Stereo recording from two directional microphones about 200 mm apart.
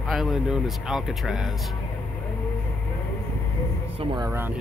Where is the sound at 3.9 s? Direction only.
20° right (ahead or behind).